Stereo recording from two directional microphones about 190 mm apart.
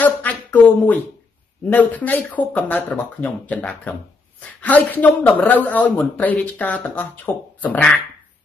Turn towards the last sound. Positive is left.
turn(degrees=10)  # may be behind; listen again after turning